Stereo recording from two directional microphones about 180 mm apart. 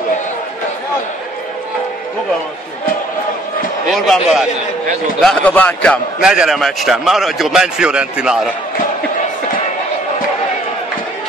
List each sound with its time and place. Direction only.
3.9 s a man's voice: centre (ahead or behind)
6.2 s a man's voice: 5° right (ahead or behind)